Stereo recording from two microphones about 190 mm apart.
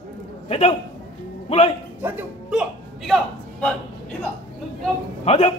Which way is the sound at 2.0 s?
10° right (ahead or behind).